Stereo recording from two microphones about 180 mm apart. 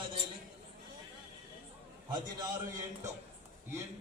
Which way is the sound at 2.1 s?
25° right (ahead or behind).